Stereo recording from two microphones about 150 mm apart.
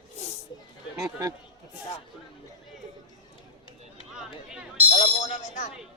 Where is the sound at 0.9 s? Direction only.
20° right (ahead or behind).